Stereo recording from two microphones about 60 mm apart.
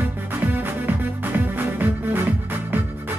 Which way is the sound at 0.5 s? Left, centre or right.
Right.